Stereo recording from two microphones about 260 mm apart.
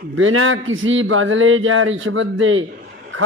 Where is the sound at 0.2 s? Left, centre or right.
Right.